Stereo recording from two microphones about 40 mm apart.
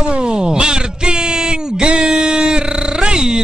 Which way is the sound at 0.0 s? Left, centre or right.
Right.